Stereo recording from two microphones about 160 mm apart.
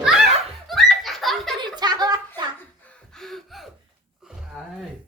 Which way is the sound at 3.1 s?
Centre (ahead or behind).